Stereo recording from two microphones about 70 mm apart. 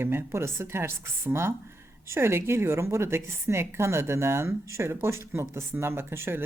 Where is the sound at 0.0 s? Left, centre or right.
Right.